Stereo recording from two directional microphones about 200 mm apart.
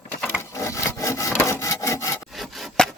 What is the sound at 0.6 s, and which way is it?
Rub, 15° left (ahead or behind).